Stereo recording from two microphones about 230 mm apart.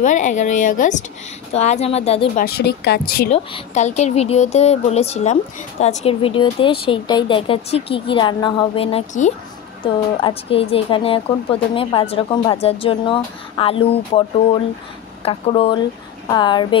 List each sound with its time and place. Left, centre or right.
0.0 s a woman's voice: left
2.4 s speech: left
3.3 s a woman's voice: left